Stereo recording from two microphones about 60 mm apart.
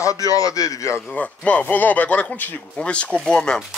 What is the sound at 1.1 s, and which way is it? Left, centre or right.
Speech, centre.